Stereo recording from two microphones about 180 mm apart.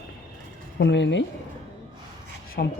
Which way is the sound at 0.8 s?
75° left (ahead or behind).